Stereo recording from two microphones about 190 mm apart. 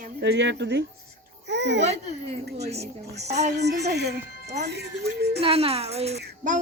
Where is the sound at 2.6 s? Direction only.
60° right (ahead or behind).